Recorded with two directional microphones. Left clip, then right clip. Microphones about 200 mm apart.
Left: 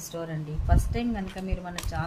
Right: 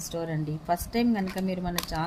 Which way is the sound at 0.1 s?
25° right (ahead or behind).